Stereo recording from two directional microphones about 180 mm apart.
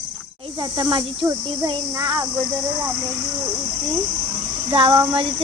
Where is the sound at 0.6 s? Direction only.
25° right (ahead or behind).